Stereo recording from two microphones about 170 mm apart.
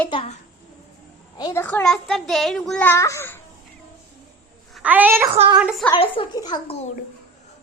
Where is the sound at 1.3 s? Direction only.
25° left (ahead or behind).